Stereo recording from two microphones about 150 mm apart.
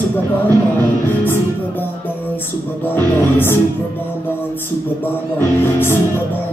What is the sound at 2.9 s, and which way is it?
Music, 15° left (ahead or behind).